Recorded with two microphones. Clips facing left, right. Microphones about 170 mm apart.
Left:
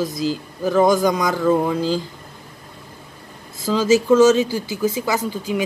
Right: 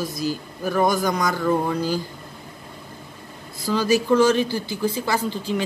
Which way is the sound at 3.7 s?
20° left (ahead or behind).